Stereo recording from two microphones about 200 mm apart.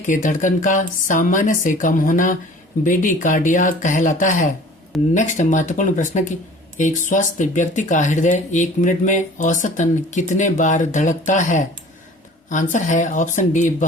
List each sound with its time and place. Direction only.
0.1 s speech: 40° left (ahead or behind)